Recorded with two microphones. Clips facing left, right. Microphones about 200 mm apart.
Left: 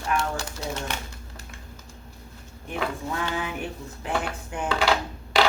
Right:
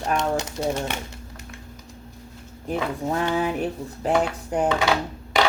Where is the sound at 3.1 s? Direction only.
40° right (ahead or behind).